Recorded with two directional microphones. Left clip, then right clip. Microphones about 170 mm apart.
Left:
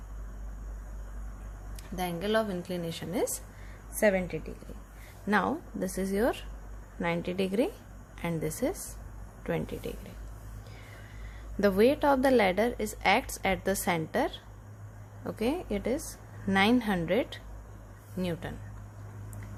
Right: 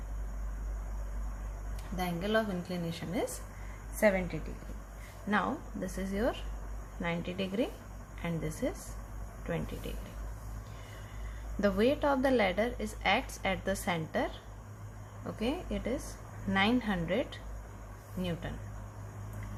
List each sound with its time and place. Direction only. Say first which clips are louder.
2.0 s a woman's voice: left 2 dB; 65° left (ahead or behind)
11.6 s a woman's voice: left 5 dB; 50° left (ahead or behind)